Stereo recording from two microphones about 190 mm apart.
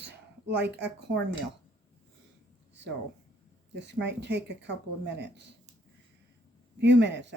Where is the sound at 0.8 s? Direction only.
65° right (ahead or behind).